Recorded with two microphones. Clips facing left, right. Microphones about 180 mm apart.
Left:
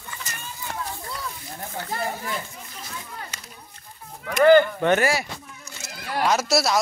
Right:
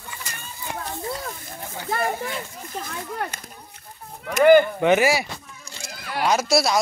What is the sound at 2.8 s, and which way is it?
Speech, 55° right (ahead or behind).